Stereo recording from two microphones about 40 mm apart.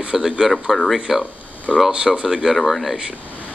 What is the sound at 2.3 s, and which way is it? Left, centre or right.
Speech, centre.